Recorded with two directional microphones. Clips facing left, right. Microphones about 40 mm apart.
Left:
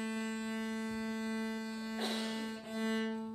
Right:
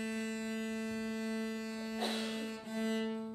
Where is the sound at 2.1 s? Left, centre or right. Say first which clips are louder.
Even; centre.